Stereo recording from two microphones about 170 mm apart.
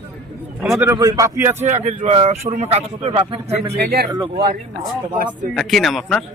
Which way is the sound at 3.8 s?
65° right (ahead or behind).